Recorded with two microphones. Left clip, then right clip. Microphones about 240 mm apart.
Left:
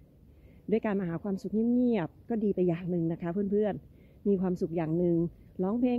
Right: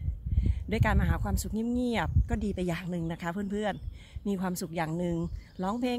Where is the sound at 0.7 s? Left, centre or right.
Centre.